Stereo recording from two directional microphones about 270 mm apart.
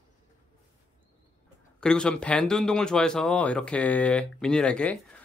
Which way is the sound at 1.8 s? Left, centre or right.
Centre.